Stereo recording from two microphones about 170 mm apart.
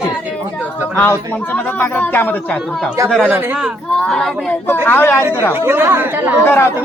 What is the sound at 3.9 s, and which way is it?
Speech, 5° left (ahead or behind).